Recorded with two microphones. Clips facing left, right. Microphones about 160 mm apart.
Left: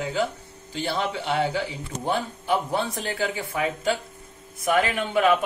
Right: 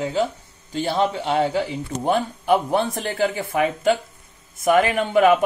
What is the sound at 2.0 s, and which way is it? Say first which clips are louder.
A man's voice: right 5 dB; 55° right (ahead or behind).